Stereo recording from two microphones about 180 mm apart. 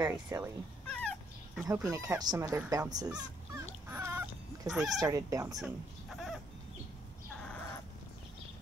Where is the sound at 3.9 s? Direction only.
15° right (ahead or behind).